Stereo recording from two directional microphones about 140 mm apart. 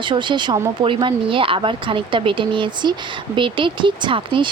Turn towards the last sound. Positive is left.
turn(degrees=-35)  # may be behind; listen again after turning